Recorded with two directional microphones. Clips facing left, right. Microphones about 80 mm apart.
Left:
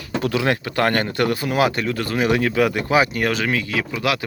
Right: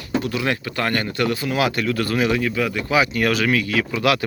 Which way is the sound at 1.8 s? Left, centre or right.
Left.